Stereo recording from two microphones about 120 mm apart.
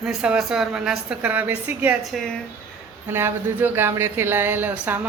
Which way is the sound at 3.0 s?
20° right (ahead or behind).